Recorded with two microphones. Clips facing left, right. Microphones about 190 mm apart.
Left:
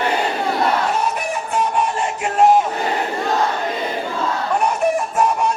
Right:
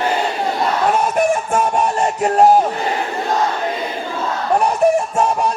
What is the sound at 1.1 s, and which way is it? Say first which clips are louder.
Music: right 6 dB; 50° right (ahead or behind).